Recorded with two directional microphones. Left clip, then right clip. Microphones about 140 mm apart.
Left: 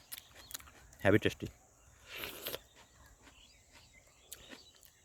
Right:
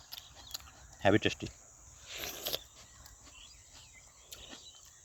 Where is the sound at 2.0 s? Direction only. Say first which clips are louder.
Right 4 dB; 15° left (ahead or behind).